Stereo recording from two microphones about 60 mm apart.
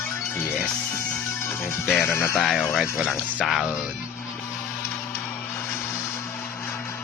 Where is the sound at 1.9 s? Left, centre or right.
Centre.